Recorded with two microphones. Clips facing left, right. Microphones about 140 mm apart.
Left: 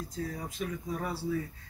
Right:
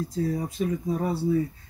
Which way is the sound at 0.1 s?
30° right (ahead or behind).